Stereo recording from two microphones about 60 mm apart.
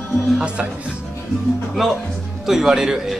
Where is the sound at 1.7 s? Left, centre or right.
Centre.